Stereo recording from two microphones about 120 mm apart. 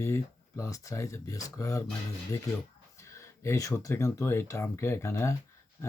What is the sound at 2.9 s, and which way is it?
Speech, 25° left (ahead or behind).